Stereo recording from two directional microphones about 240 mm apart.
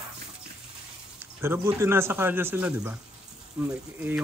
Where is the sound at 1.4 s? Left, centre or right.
Centre.